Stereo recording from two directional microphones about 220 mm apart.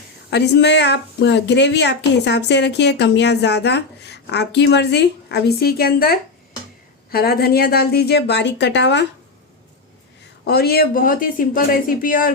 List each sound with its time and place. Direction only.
0.3 s speech: 50° left (ahead or behind)
10.4 s speech: 45° left (ahead or behind)